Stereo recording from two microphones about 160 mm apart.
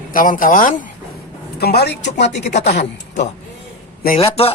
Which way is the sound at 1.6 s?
90° left.